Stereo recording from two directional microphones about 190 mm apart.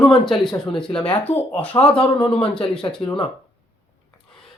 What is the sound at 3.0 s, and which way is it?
Speech, 30° left (ahead or behind).